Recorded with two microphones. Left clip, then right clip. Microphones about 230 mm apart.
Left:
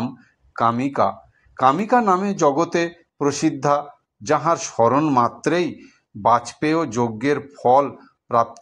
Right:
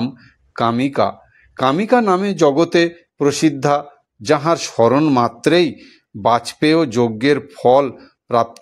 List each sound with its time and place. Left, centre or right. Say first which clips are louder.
0.0 s speech: right 4 dB; right